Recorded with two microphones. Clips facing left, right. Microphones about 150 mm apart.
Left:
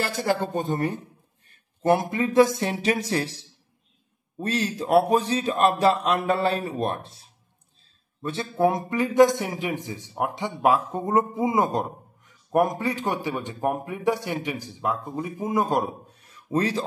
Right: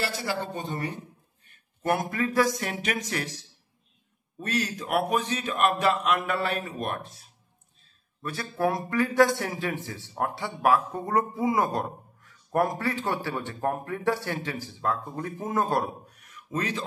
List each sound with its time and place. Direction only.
0.0 s speech: 50° left (ahead or behind)
1.5 s a man's voice: 30° left (ahead or behind)